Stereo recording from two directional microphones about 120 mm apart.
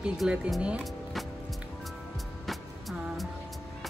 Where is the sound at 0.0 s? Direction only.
5° right (ahead or behind).